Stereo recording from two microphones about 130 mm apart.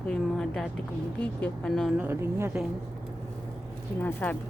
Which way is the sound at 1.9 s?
15° right (ahead or behind).